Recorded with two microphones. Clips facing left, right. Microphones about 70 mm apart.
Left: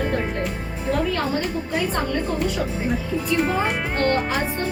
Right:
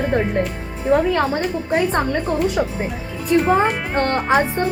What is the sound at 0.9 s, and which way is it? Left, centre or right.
A woman's voice, right.